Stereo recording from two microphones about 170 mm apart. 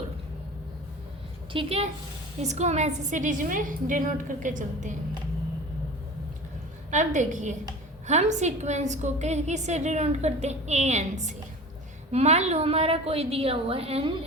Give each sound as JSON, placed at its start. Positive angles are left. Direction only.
{"t": 1.5, "sound": "a woman's voice", "side_deg": -35}
{"t": 6.9, "sound": "a woman's voice", "side_deg": -45}